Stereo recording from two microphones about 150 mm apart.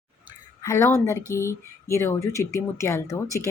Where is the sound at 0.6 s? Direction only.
20° left (ahead or behind).